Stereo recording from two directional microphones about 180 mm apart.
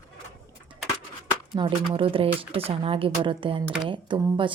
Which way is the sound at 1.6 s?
25° right (ahead or behind).